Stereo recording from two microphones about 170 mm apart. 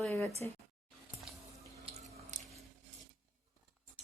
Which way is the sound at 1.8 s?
35° right (ahead or behind).